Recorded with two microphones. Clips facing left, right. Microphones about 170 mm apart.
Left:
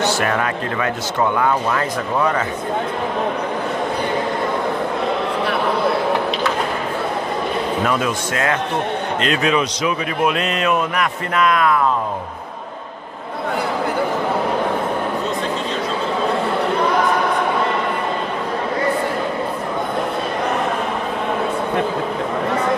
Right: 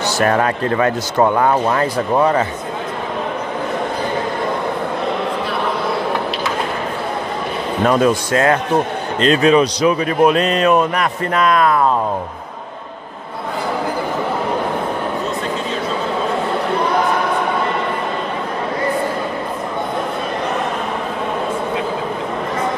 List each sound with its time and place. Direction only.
0.0 s a man's voice: 40° right (ahead or behind)
7.8 s a man's voice: 35° right (ahead or behind)